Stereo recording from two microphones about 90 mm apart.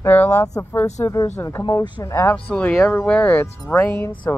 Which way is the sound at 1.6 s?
50° left (ahead or behind).